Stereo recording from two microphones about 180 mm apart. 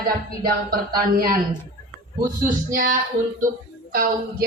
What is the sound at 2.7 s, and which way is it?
Speech, 50° right (ahead or behind).